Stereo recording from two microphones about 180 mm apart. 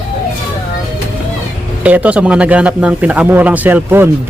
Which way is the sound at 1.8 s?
10° right (ahead or behind).